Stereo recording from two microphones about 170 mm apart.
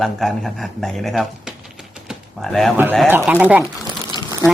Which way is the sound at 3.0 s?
10° right (ahead or behind).